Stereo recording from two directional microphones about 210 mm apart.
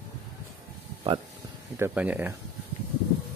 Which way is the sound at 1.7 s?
10° right (ahead or behind).